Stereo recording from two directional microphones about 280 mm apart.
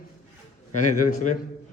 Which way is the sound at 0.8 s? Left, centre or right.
Left.